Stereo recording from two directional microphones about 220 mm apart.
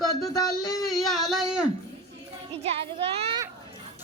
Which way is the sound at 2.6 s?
25° right (ahead or behind).